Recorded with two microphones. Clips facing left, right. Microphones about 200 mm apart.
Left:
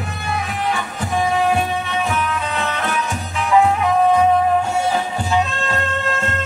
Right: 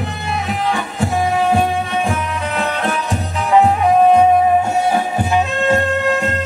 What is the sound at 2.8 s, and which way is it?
Music, 35° right (ahead or behind).